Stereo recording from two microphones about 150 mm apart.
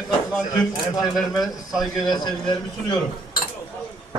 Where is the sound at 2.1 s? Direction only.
30° left (ahead or behind).